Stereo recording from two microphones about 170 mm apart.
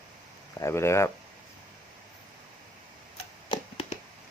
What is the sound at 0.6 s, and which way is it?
Speech, 15° left (ahead or behind).